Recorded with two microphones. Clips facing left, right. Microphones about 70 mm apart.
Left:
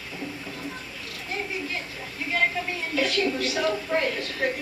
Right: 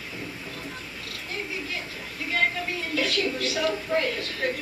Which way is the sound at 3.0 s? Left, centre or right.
Centre.